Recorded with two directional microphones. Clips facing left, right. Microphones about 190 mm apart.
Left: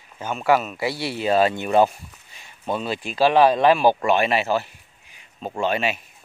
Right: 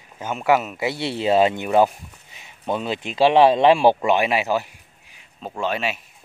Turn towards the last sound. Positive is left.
turn(degrees=0)  # may be behind; listen again after turning